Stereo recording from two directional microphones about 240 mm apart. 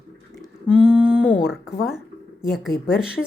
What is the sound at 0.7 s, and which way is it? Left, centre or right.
A woman's voice, centre.